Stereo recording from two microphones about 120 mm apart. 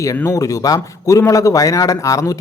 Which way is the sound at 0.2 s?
25° left (ahead or behind).